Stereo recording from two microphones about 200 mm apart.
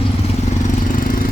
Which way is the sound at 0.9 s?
45° left (ahead or behind).